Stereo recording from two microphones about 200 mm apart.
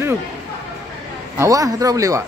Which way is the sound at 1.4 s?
15° right (ahead or behind).